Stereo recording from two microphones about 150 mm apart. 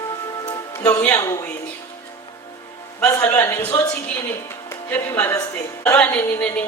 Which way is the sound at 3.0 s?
15° left (ahead or behind).